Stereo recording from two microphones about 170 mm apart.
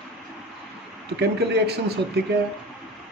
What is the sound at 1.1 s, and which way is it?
Speech, 75° right (ahead or behind).